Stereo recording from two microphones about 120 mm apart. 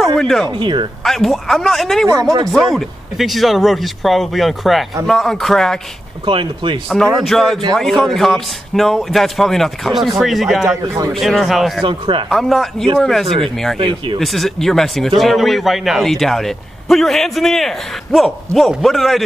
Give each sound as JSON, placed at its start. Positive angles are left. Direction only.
{"t": 0.0, "sound": "a sound", "side_deg": 5}
{"t": 0.5, "sound": "speech", "side_deg": -40}
{"t": 1.0, "sound": "speech", "side_deg": 0}
{"t": 6.2, "sound": "speech", "side_deg": -45}
{"t": 6.9, "sound": "speech", "side_deg": 0}
{"t": 11.8, "sound": "speech", "side_deg": -45}
{"t": 12.3, "sound": "speech", "side_deg": 0}
{"t": 13.7, "sound": "speech", "side_deg": -45}
{"t": 14.2, "sound": "speech", "side_deg": 0}